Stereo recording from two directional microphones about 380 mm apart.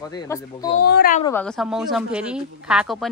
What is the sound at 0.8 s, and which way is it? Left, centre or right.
Speech, left.